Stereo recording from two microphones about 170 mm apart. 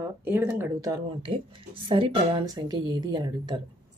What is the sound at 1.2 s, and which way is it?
A woman's voice, 30° right (ahead or behind).